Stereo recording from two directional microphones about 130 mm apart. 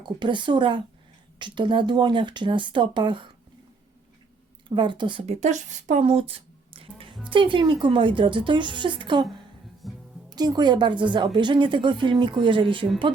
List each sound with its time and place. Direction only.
0.0 s a woman's voice: 35° right (ahead or behind)
4.7 s a woman's voice: 35° right (ahead or behind)
5.2 s a woman's voice: 60° right (ahead or behind); by 9.2 s 35° right (ahead or behind)
9.8 s music: centre (ahead or behind)
10.2 s a woman's voice: 30° right (ahead or behind)